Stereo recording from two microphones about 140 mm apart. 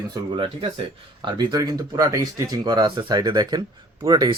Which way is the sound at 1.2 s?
30° right (ahead or behind).